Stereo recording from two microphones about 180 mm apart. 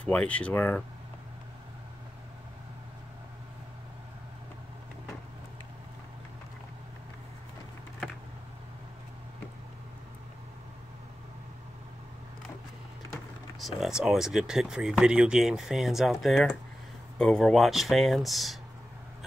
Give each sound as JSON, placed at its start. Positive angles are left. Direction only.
{"t": 0.0, "sound": "speech", "side_deg": 5}
{"t": 13.6, "sound": "speech", "side_deg": 0}